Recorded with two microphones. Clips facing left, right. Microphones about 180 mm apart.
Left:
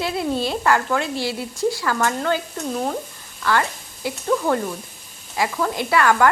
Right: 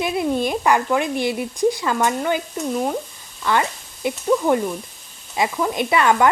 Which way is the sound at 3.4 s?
20° right (ahead or behind).